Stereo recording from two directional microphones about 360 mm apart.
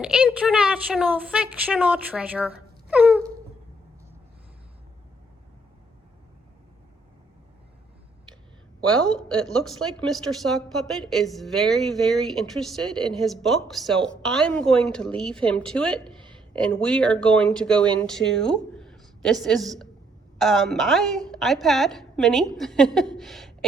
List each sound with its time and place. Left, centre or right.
0.0 s a woman's voice: centre
8.9 s a woman's voice: centre
18.8 s a sound: centre
20.4 s a woman's voice: centre